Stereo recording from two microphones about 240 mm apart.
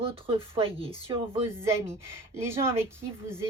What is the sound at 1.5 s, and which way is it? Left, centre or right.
Speech, centre.